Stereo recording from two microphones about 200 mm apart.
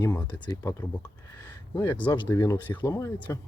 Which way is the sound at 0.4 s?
15° left (ahead or behind).